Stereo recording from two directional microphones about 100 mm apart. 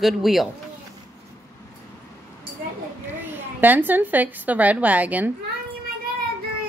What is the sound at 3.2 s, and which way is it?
A woman's voice, 20° right (ahead or behind).